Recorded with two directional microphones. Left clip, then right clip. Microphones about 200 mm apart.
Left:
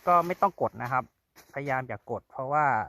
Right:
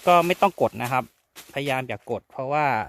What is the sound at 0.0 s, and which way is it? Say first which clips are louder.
Speech: right 5 dB; 45° right (ahead or behind).